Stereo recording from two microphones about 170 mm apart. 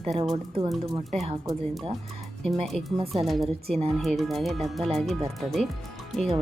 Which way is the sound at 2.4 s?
Centre (ahead or behind).